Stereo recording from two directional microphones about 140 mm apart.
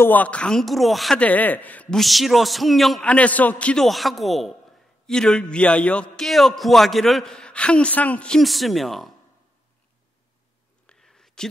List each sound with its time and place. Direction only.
0.0 s speech: 10° left (ahead or behind)
10.9 s whispering: 5° left (ahead or behind)